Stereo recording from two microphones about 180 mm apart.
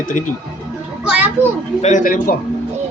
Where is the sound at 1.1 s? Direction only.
10° right (ahead or behind).